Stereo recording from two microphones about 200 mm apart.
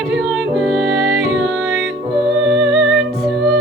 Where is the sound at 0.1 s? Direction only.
Centre (ahead or behind).